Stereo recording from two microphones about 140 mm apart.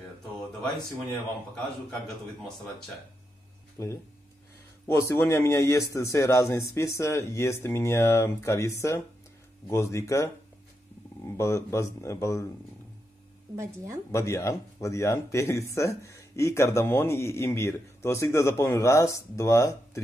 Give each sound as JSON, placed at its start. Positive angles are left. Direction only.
{"t": 1.1, "sound": "a man's voice", "side_deg": 5}
{"t": 3.8, "sound": "speech", "side_deg": 25}
{"t": 13.6, "sound": "speech", "side_deg": -20}
{"t": 14.1, "sound": "speech", "side_deg": 20}